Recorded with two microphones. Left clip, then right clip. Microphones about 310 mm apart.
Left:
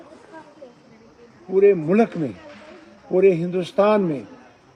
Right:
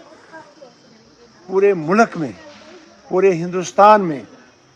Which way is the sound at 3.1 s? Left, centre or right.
Centre.